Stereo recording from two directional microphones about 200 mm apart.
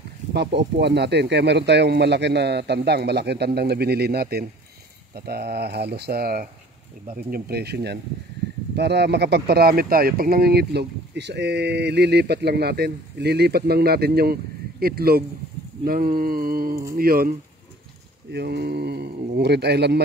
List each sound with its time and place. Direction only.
0.3 s speech: 55° right (ahead or behind)
18.3 s speech: 55° right (ahead or behind)